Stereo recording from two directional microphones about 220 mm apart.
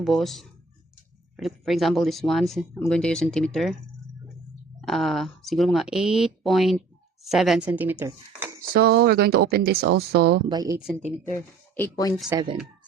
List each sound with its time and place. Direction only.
0.0 s speech: centre (ahead or behind)
4.8 s speech: centre (ahead or behind)
8.7 s speech: 45° right (ahead or behind)
10.5 s speech: 15° right (ahead or behind)
10.8 s speech: centre (ahead or behind)
12.1 s speech: centre (ahead or behind)